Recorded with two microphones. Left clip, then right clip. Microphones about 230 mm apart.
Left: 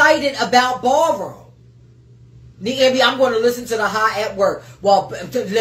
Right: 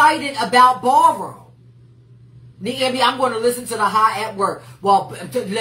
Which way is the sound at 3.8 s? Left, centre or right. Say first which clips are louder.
Right 3 dB; left.